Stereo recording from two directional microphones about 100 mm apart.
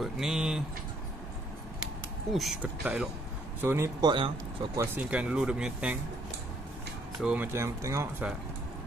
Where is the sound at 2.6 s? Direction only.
10° right (ahead or behind).